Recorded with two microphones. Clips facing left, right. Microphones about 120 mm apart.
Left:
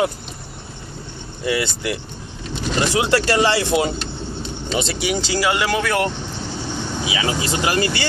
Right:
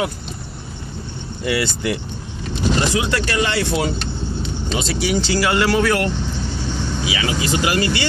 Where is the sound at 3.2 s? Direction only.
30° left (ahead or behind).